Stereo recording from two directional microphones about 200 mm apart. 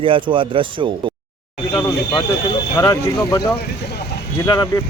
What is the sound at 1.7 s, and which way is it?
Speech, 10° left (ahead or behind).